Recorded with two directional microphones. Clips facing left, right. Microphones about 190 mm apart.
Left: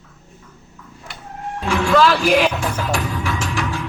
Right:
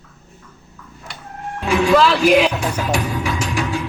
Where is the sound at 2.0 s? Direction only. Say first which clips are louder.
Right 2 dB; centre (ahead or behind).